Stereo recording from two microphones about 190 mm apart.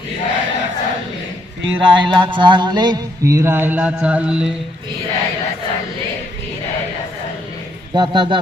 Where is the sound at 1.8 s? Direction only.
25° right (ahead or behind); by 4.5 s 5° right (ahead or behind).